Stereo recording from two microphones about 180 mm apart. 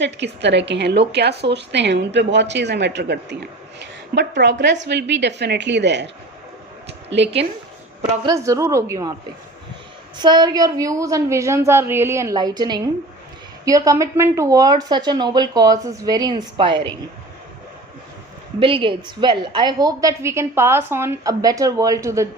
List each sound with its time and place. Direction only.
0.0 s a woman's voice: 75° right (ahead or behind)
6.8 s a sound: 75° right (ahead or behind)
8.2 s a woman's voice: 20° right (ahead or behind)
10.2 s a woman's voice: 25° right (ahead or behind)
18.6 s a woman's voice: 30° right (ahead or behind)